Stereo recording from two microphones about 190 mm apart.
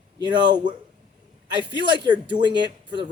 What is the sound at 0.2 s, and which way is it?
Speech, 25° right (ahead or behind).